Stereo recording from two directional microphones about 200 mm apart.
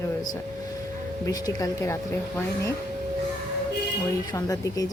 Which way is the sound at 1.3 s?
20° left (ahead or behind).